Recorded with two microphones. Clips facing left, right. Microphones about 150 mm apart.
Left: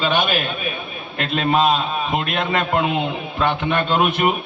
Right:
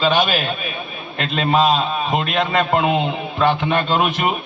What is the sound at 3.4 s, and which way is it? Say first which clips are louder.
Speech: right 2 dB; 50° left (ahead or behind).